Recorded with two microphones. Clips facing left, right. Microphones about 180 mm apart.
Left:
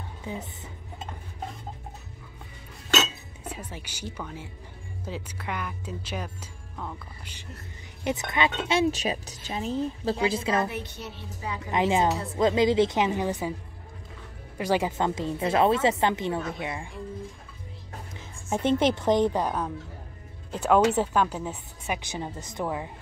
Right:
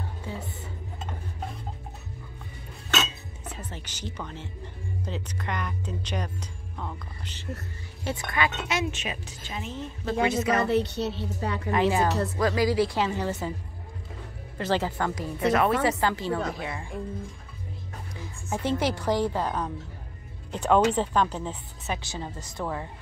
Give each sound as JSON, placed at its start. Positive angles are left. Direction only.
{"t": 0.2, "sound": "speech", "side_deg": 20}
{"t": 3.4, "sound": "speech", "side_deg": 10}
{"t": 8.0, "sound": "speech", "side_deg": 20}
{"t": 10.7, "sound": "a woman's voice", "side_deg": -75}
{"t": 11.7, "sound": "speech", "side_deg": 20}
{"t": 14.6, "sound": "speech", "side_deg": 15}
{"t": 18.2, "sound": "speech", "side_deg": 20}